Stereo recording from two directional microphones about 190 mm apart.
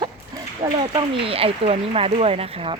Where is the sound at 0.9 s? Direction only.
25° right (ahead or behind).